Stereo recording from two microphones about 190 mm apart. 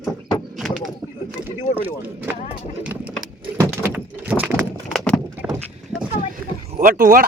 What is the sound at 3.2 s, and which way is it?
Keys jangling, 20° right (ahead or behind).